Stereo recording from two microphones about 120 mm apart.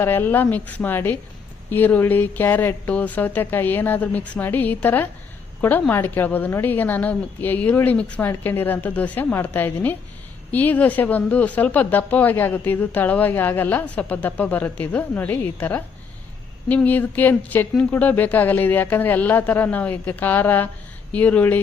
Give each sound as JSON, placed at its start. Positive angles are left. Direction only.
{"t": 0.0, "sound": "speech", "side_deg": 15}